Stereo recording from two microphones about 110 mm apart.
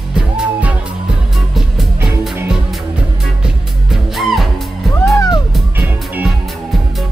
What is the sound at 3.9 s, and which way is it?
Music, centre (ahead or behind).